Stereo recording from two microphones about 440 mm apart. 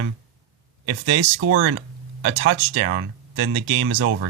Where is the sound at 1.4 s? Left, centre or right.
Right.